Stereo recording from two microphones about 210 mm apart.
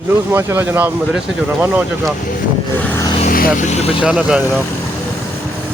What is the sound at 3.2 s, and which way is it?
Speech, 40° left (ahead or behind).